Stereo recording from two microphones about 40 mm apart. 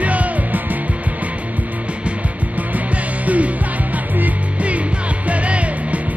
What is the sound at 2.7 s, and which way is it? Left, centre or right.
Music, right.